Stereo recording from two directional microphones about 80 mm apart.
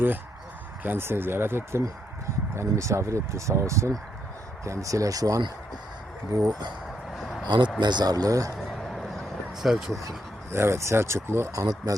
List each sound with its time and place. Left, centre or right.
0.8 s speech: right
7.2 s a sound: centre
7.4 s speech: right
8.7 s a sound: centre
10.5 s speech: right
11.5 s speech: right